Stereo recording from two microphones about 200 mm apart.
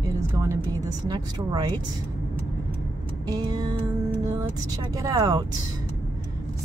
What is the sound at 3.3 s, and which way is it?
Speech, 20° right (ahead or behind).